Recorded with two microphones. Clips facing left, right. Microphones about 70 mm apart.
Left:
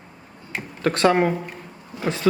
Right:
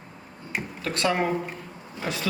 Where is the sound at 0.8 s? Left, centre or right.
Left.